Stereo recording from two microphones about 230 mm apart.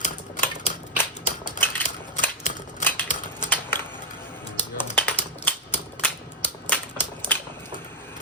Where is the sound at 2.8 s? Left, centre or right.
Centre.